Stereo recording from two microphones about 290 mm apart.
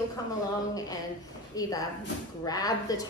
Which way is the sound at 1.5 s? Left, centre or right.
Centre.